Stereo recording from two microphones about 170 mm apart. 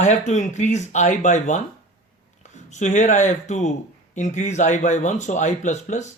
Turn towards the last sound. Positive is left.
turn(degrees=45)  # may be behind; listen again after turning